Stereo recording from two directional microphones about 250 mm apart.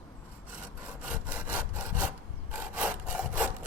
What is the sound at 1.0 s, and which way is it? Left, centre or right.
Sawing, centre.